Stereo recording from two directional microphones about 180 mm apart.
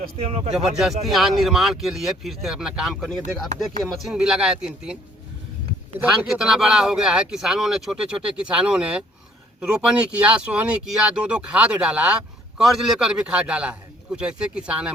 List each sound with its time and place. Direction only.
0.2 s speech: 35° right (ahead or behind)
0.8 s speech: centre (ahead or behind)
6.2 s speech: 5° right (ahead or behind)
10.2 s speech: 5° right (ahead or behind)